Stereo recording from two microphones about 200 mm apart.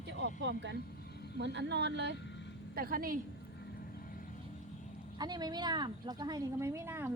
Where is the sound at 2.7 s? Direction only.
45° right (ahead or behind).